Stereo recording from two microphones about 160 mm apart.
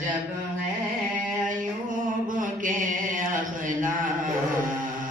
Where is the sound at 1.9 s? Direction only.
55° right (ahead or behind).